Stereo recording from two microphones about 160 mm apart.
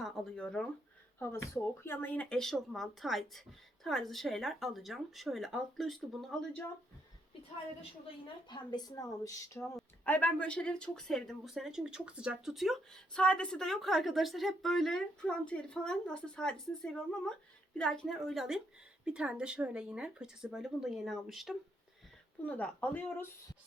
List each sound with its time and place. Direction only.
0.0 s speech: 5° left (ahead or behind)
1.2 s speech: 15° left (ahead or behind)
8.4 s speech: 25° left (ahead or behind)
9.7 s speech: 10° left (ahead or behind)